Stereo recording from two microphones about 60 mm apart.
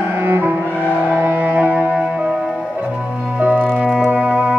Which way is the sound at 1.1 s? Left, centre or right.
Right.